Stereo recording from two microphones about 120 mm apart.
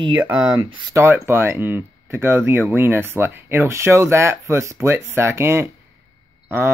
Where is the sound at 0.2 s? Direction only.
10° right (ahead or behind).